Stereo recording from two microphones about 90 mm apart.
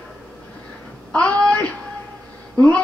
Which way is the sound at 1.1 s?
15° left (ahead or behind).